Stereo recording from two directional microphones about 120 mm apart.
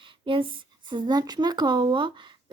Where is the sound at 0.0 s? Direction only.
45° right (ahead or behind).